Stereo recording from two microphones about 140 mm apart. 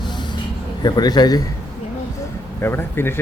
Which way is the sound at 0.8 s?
30° left (ahead or behind).